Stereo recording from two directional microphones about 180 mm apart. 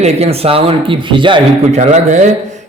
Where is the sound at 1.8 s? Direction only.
40° right (ahead or behind).